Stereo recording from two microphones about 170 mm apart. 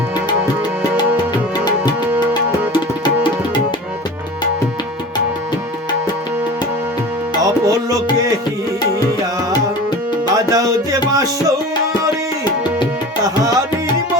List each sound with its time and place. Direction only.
2.3 s tabla: 25° left (ahead or behind)
7.4 s music: 20° right (ahead or behind)
10.3 s music: 20° right (ahead or behind)